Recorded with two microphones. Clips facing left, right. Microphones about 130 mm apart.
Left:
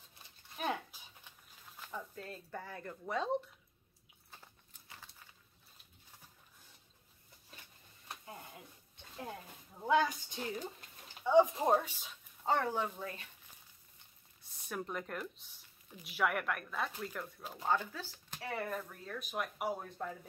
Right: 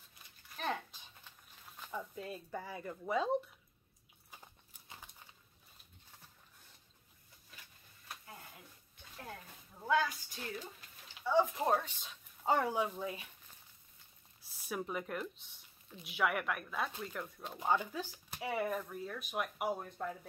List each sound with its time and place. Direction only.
0.6 s dog: 10° left (ahead or behind)
1.8 s speech: 5° right (ahead or behind)
4.3 s horse: 15° right (ahead or behind)
8.9 s a sound: 25° left (ahead or behind)
11.2 s speech: 20° left (ahead or behind)
12.4 s speech: 10° right (ahead or behind)
14.5 s speech: 5° right (ahead or behind)
17.6 s speech: 15° right (ahead or behind)